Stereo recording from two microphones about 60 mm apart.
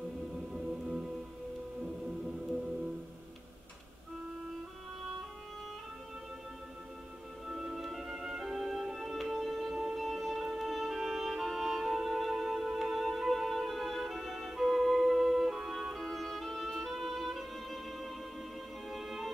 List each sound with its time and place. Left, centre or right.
0.5 s music: centre
7.4 s music: centre